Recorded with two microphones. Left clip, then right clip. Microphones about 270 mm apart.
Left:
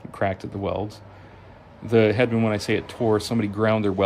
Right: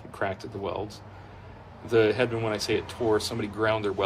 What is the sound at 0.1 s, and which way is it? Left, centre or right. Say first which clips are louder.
Speech: left 5 dB; left.